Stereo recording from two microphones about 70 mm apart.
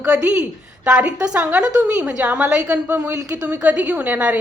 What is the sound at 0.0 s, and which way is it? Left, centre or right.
A woman's voice, centre.